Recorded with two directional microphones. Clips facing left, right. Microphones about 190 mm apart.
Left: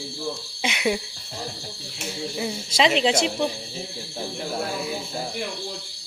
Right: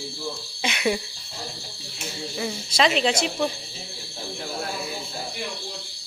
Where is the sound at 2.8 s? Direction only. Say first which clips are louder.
Left 2 dB; 25° left (ahead or behind).